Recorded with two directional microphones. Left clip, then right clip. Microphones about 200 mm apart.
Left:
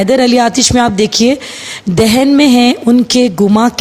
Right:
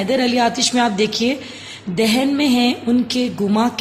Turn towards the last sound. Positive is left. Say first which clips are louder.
# left 9 dB
turn(degrees=45)  # may be behind; listen again after turning